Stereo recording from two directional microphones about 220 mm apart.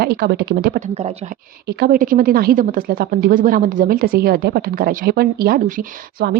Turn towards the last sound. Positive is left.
turn(degrees=-40)  # may be behind; listen again after turning